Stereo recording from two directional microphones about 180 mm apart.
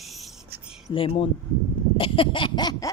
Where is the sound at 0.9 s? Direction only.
30° left (ahead or behind).